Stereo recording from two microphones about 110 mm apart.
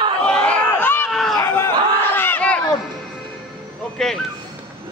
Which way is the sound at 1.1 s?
Centre (ahead or behind).